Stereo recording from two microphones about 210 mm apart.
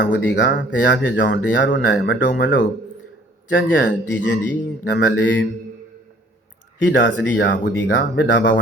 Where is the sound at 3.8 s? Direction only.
60° left (ahead or behind).